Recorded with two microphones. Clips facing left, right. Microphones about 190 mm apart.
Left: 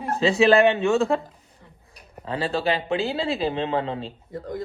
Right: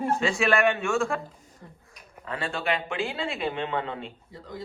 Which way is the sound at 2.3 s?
30° left (ahead or behind).